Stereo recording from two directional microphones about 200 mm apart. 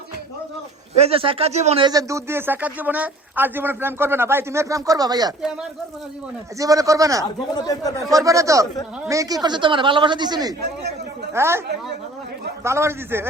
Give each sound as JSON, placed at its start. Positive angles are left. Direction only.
{"t": 0.9, "sound": "a man's voice", "side_deg": -30}
{"t": 6.6, "sound": "a man's voice", "side_deg": -15}
{"t": 7.5, "sound": "speech", "side_deg": 20}
{"t": 8.1, "sound": "a man's voice", "side_deg": -15}
{"t": 12.6, "sound": "a man's voice", "side_deg": -15}